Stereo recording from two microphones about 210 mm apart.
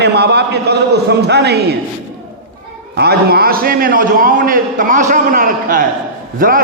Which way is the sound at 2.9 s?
50° right (ahead or behind).